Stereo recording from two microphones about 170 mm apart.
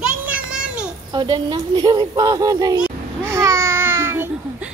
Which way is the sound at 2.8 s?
15° right (ahead or behind).